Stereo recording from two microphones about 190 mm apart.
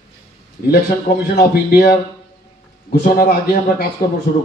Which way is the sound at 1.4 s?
55° left (ahead or behind).